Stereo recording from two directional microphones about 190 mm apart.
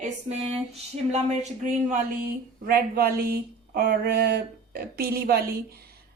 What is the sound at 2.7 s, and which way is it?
Speech, 55° right (ahead or behind).